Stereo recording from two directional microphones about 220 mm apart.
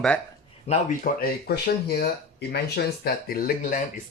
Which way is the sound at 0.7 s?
40° left (ahead or behind).